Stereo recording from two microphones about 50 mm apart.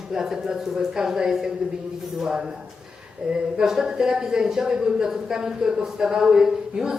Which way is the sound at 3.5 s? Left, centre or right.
Centre.